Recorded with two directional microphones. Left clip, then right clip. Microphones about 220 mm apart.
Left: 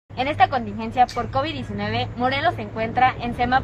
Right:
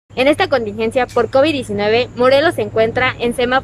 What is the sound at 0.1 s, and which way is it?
Speech, 50° right (ahead or behind).